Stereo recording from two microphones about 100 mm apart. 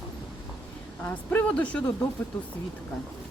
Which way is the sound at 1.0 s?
15° left (ahead or behind).